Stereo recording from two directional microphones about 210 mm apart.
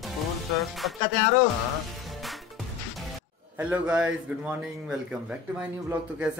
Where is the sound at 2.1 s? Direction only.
Centre (ahead or behind).